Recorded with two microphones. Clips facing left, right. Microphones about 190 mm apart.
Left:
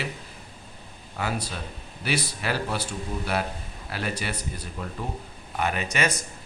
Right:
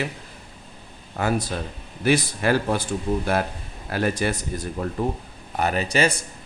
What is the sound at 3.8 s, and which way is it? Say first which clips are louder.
Speech: right 8 dB; 45° right (ahead or behind).